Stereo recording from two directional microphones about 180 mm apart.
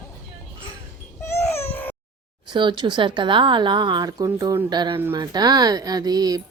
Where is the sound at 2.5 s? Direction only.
25° right (ahead or behind).